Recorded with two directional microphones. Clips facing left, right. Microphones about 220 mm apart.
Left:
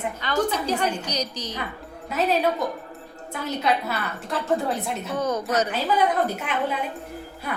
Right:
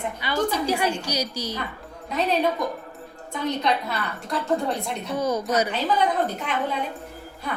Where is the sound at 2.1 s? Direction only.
5° left (ahead or behind).